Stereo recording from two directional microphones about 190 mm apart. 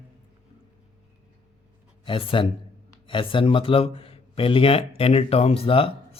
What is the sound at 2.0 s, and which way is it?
Speech, 25° left (ahead or behind).